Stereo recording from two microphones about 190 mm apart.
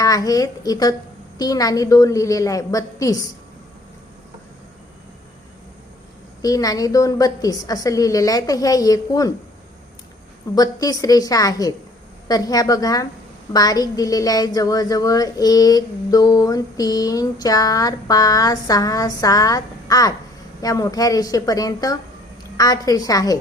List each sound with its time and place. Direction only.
0.0 s a woman's voice: 20° left (ahead or behind)
6.4 s a woman's voice: 20° left (ahead or behind)
10.5 s a woman's voice: 20° left (ahead or behind)